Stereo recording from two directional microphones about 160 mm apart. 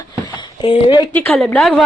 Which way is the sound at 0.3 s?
35° left (ahead or behind).